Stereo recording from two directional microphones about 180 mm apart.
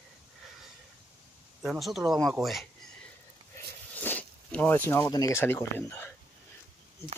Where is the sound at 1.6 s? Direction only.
Centre (ahead or behind).